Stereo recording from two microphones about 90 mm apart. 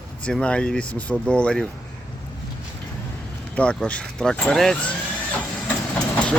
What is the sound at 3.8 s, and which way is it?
Speech, 10° left (ahead or behind).